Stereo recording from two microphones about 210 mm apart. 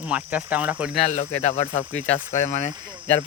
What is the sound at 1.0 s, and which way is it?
Speech, 30° left (ahead or behind).